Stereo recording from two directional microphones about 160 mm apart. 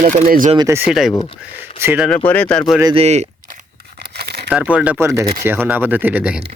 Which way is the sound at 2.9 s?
45° right (ahead or behind).